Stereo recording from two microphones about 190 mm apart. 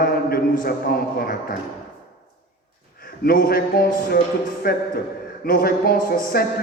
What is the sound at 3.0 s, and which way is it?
Speech, 50° left (ahead or behind).